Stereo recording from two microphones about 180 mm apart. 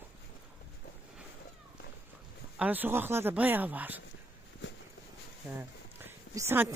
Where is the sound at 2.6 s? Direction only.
10° right (ahead or behind).